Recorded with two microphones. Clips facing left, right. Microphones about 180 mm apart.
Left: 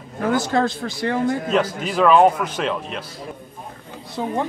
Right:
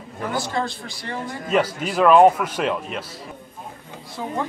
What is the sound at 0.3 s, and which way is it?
A man's voice, 50° left (ahead or behind).